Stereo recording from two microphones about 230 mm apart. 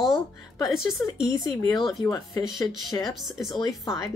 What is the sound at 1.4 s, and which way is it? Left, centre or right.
Speech, centre.